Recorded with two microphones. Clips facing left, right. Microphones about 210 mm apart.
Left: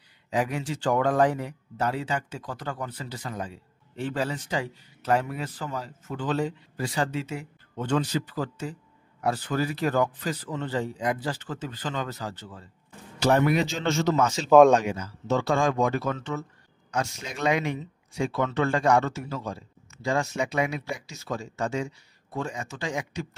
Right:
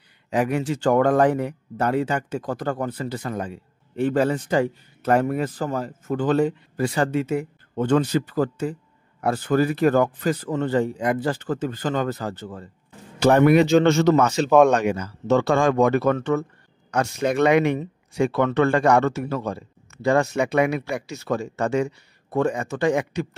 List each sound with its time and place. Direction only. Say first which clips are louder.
0.3 s speech: right 6 dB; 60° right (ahead or behind)